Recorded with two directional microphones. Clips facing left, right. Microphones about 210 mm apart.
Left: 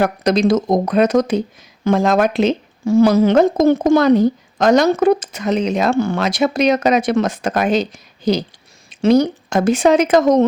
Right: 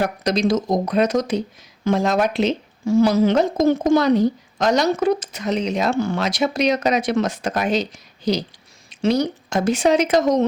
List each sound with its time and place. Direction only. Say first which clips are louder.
0.0 s speech: left 5 dB; 55° left (ahead or behind)